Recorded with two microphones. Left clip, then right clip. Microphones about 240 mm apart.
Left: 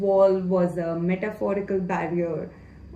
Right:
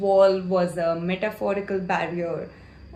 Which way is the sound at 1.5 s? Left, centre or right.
Right.